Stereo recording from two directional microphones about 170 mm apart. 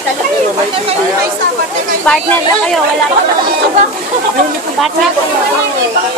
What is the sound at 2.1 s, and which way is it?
Speech, 5° left (ahead or behind).